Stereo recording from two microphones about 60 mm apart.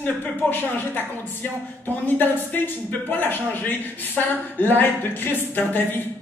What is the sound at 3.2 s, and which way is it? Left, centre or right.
Speech, left.